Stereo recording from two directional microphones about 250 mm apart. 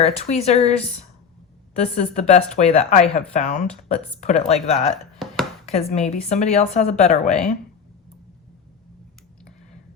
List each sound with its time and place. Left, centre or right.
0.0 s speech: left
1.7 s speech: left
5.2 s chopping: centre
5.6 s speech: left